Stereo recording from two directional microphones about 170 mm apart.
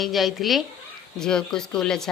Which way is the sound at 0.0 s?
Centre (ahead or behind).